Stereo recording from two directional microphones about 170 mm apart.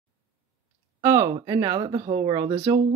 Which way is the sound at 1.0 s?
20° right (ahead or behind).